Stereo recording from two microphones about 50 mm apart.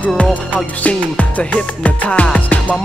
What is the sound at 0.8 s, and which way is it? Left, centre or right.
Music, left.